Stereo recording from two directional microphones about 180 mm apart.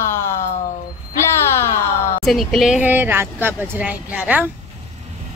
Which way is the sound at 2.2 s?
Centre (ahead or behind).